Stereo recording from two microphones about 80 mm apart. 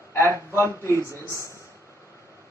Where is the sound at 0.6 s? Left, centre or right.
Right.